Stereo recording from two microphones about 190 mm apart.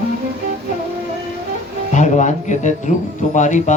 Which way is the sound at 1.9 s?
40° left (ahead or behind).